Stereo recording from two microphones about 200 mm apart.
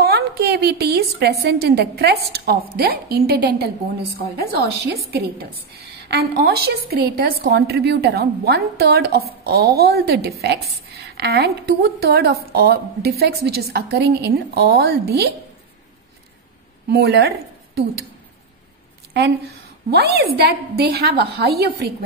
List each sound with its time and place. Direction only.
0.0 s a woman's voice: 55° right (ahead or behind)
16.9 s a woman's voice: 55° right (ahead or behind)
19.1 s a woman's voice: 55° right (ahead or behind)